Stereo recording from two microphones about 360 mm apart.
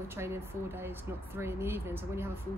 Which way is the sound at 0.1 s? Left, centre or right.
Centre.